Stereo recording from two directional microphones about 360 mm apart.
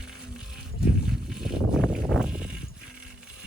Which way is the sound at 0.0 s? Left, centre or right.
Centre.